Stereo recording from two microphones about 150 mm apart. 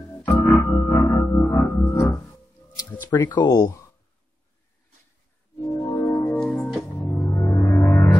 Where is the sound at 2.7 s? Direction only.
25° left (ahead or behind).